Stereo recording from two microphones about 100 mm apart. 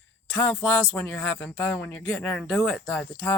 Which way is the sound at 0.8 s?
15° left (ahead or behind).